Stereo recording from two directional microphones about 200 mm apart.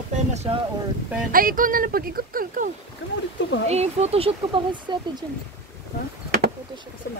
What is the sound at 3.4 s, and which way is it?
Speech, 65° left (ahead or behind).